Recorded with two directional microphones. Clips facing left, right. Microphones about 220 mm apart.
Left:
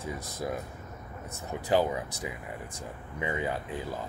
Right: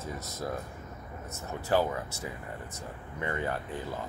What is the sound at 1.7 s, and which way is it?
Speech, 15° left (ahead or behind).